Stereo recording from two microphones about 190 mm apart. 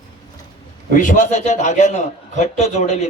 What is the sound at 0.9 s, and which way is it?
A man's voice, 45° left (ahead or behind).